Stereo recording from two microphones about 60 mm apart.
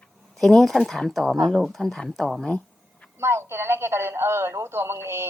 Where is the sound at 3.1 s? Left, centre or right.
Right.